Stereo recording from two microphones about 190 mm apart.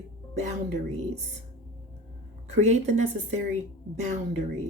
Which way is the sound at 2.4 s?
35° right (ahead or behind).